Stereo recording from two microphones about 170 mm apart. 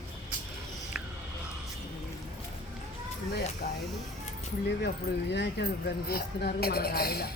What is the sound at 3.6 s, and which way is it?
Speech, 65° left (ahead or behind).